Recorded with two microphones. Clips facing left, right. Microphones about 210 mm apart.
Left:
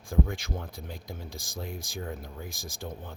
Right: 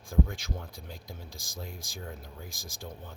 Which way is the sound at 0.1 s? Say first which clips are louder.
Left 1 dB; 55° left (ahead or behind).